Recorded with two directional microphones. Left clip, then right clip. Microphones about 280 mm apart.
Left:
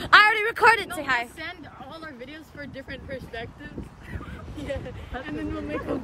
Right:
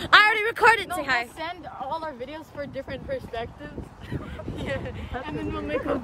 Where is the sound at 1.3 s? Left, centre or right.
Centre.